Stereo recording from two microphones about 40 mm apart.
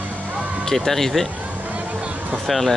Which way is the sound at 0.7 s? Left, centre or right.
Centre.